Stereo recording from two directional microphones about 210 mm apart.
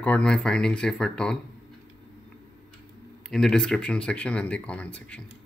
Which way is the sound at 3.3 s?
5° left (ahead or behind).